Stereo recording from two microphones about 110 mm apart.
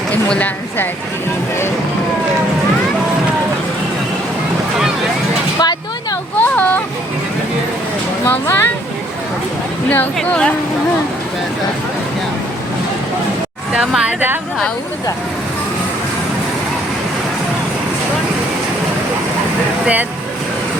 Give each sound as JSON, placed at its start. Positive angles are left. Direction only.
{"t": 0.3, "sound": "speech", "side_deg": 15}
{"t": 5.5, "sound": "a sound", "side_deg": 35}
{"t": 6.4, "sound": "a sound", "side_deg": 15}
{"t": 8.3, "sound": "speech", "side_deg": 20}
{"t": 10.2, "sound": "speech", "side_deg": 10}
{"t": 13.7, "sound": "speech", "side_deg": -10}
{"t": 19.8, "sound": "speech", "side_deg": -15}